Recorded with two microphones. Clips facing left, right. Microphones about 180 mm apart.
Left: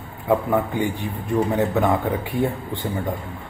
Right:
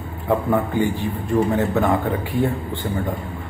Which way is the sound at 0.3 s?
15° left (ahead or behind).